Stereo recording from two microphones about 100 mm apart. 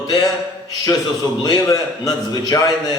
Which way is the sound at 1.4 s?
35° left (ahead or behind).